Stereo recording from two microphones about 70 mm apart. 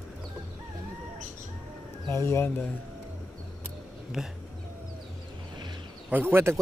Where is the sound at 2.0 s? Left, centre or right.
Left.